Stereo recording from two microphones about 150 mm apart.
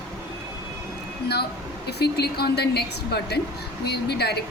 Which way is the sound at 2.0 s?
90° left.